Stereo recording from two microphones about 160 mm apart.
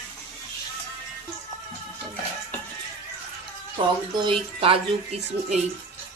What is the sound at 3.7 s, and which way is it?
Speech, 30° right (ahead or behind).